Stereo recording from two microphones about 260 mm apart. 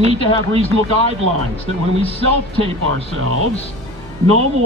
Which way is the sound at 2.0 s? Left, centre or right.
Left.